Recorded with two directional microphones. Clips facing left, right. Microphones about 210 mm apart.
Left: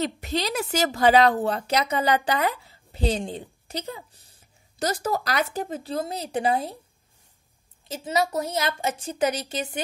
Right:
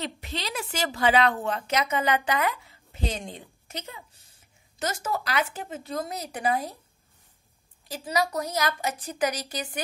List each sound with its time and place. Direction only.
0.0 s a woman's voice: 40° left (ahead or behind)
7.9 s a woman's voice: 25° left (ahead or behind)